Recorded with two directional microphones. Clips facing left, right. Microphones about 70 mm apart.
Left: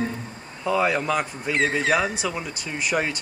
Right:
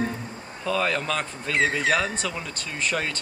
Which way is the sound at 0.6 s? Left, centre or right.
Centre.